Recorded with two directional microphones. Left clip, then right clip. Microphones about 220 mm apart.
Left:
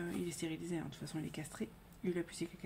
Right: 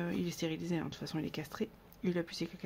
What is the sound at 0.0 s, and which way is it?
Speech, 40° right (ahead or behind).